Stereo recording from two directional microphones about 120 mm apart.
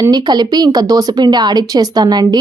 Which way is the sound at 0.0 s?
35° right (ahead or behind).